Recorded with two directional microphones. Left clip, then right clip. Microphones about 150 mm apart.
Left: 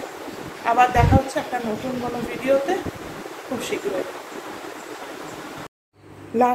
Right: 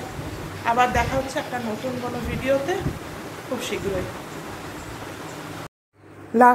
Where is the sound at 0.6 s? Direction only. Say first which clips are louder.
Left 3 dB; 5° left (ahead or behind).